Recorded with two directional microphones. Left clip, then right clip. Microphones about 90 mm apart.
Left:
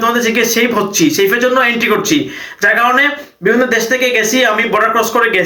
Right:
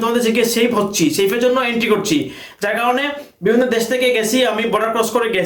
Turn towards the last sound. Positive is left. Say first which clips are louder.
# left 5 dB
turn(degrees=-35)  # may be behind; listen again after turning